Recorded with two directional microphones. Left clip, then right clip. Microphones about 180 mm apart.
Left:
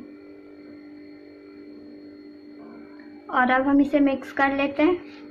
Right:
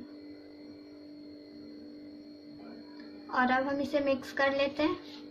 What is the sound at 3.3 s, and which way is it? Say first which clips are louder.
A woman's voice: left 8 dB; 30° left (ahead or behind).